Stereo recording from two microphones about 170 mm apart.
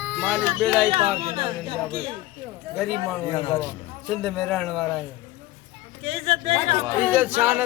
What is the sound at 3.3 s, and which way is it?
Speech, 35° left (ahead or behind).